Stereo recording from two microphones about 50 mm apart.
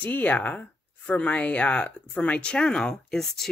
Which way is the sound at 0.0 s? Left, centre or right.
Left.